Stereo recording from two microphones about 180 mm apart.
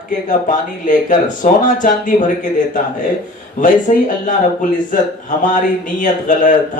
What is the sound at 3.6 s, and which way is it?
Speech, 45° left (ahead or behind).